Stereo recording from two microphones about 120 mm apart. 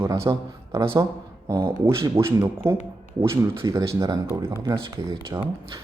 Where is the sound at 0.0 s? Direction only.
25° right (ahead or behind).